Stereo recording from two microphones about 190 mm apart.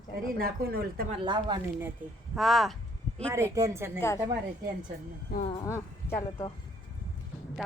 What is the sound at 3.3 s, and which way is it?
Speech, 15° right (ahead or behind).